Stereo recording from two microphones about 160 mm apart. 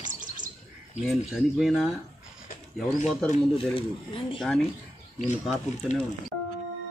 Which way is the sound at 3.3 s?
35° left (ahead or behind).